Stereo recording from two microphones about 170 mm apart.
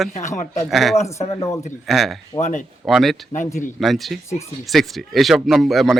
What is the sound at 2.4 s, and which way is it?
Speech, 45° left (ahead or behind).